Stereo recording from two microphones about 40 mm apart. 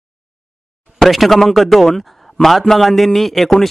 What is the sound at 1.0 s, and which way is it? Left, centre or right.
Speech, centre.